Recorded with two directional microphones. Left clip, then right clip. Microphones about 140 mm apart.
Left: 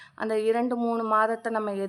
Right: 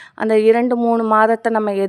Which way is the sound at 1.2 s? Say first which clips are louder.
Right 10 dB; 70° right (ahead or behind).